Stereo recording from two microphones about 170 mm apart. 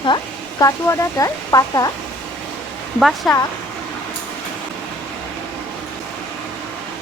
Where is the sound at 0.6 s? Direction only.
20° left (ahead or behind).